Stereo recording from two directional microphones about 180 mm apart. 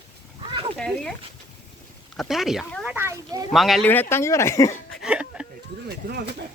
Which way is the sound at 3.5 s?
Centre (ahead or behind).